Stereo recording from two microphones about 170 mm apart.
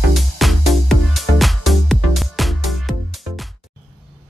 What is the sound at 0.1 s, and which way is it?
Music, centre (ahead or behind).